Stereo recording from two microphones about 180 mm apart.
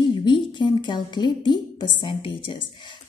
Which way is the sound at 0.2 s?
25° left (ahead or behind).